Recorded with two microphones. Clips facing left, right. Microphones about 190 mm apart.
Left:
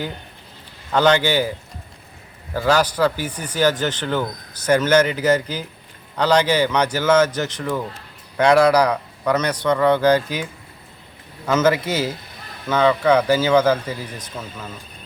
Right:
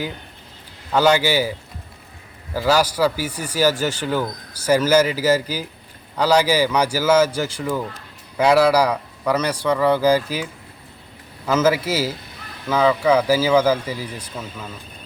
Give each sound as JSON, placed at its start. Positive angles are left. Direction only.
{"t": 0.9, "sound": "a man's voice", "side_deg": -10}
{"t": 11.4, "sound": "a man's voice", "side_deg": -5}